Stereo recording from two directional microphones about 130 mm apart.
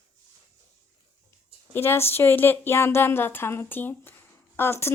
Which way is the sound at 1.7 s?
20° left (ahead or behind).